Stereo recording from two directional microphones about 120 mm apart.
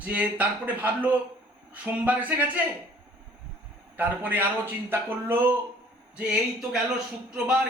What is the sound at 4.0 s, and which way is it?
Speech, 15° right (ahead or behind).